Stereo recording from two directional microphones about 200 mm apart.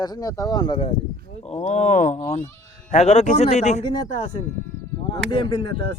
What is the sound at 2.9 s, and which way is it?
Speech, 35° left (ahead or behind).